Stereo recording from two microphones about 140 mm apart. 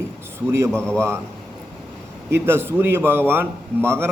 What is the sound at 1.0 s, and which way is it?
Speech, 20° right (ahead or behind).